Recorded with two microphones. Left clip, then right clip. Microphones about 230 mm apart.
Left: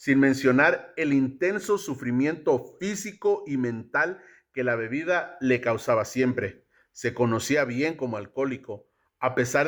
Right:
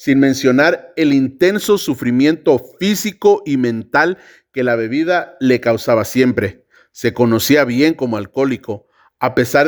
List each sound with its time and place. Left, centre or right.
0.0 s speech: right
3.0 s speech: right
5.6 s speech: right
5.9 s speech: right
7.1 s speech: right
7.5 s speech: right
7.9 s speech: right
9.2 s speech: right